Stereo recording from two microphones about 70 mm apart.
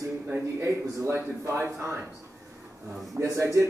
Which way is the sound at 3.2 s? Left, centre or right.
Right.